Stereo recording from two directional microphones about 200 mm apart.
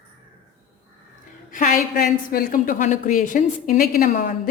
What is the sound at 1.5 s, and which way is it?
A woman's voice, 40° left (ahead or behind).